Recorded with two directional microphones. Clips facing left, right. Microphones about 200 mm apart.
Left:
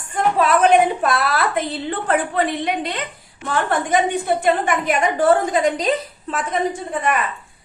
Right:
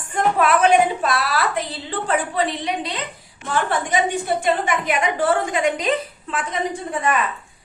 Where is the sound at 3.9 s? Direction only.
55° left (ahead or behind); by 5.9 s 35° left (ahead or behind).